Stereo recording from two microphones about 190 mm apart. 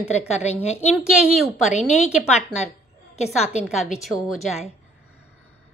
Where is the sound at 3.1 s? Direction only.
35° left (ahead or behind).